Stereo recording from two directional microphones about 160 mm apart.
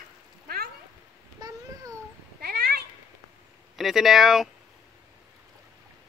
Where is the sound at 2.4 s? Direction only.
85° right.